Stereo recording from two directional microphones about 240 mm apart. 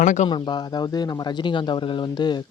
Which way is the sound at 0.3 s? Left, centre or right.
Centre.